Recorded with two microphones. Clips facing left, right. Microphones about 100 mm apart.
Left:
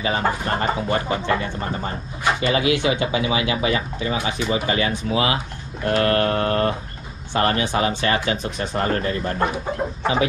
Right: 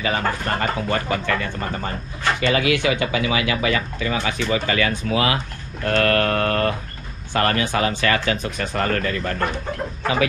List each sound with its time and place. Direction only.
0.2 s speech: 15° left (ahead or behind)
0.6 s speech: 25° left (ahead or behind)
2.5 s speech: 20° left (ahead or behind)